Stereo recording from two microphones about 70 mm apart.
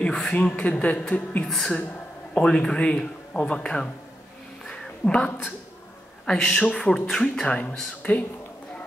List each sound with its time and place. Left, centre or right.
0.0 s speech: centre
1.5 s speech: centre
4.6 s a sound: centre
6.2 s speech: centre
7.4 s speech: centre